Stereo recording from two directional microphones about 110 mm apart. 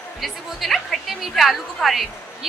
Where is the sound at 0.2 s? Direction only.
Centre (ahead or behind).